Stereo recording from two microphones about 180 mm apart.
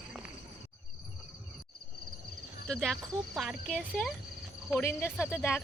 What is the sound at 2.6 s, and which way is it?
Speech, 5° left (ahead or behind).